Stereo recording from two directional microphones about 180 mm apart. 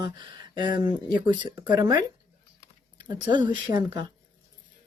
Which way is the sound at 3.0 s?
25° right (ahead or behind).